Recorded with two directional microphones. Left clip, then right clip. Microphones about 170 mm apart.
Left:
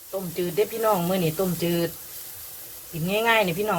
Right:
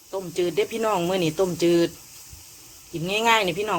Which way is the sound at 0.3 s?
30° right (ahead or behind).